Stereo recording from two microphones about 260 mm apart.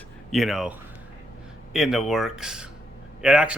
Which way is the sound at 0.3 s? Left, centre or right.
Centre.